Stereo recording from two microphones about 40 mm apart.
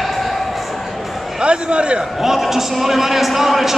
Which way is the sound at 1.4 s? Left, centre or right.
Right.